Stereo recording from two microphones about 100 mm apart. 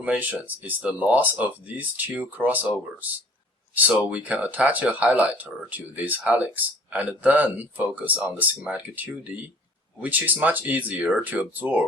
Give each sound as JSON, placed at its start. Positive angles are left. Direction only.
{"t": 0.0, "sound": "speech", "side_deg": -15}
{"t": 3.8, "sound": "speech", "side_deg": -15}